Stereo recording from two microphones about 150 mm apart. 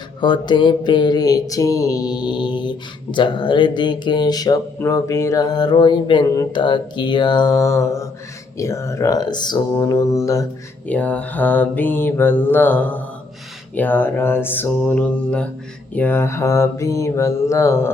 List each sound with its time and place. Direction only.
0.2 s mantra: 30° left (ahead or behind)
8.5 s speech: 20° left (ahead or behind)
10.8 s mantra: 10° left (ahead or behind)
16.0 s speech: 15° left (ahead or behind)